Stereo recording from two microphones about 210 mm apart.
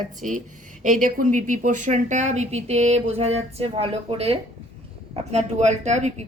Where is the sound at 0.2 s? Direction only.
40° right (ahead or behind).